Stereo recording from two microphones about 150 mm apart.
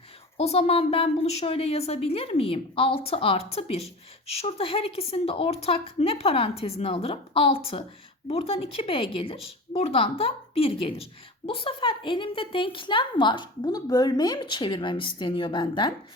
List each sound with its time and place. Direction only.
0.3 s a woman's voice: 45° left (ahead or behind)